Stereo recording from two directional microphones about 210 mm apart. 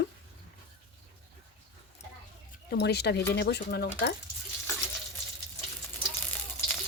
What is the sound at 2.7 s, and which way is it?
Speech, 50° left (ahead or behind).